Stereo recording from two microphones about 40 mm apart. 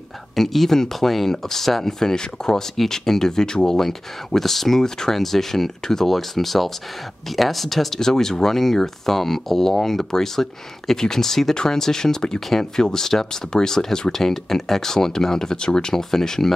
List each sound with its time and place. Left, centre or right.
0.4 s speech: centre
15.9 s speech: centre